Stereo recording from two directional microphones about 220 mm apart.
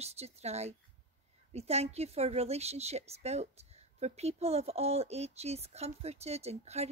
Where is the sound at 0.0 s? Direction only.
30° right (ahead or behind).